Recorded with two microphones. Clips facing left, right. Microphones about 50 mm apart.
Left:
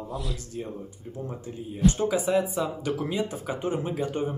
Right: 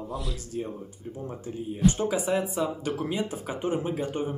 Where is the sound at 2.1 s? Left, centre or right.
Right.